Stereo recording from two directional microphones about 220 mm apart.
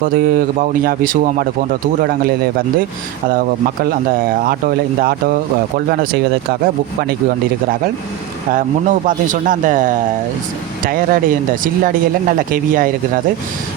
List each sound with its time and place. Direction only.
0.0 s speech: 40° right (ahead or behind)
3.8 s speech: 40° right (ahead or behind)
8.5 s speech: 35° right (ahead or behind)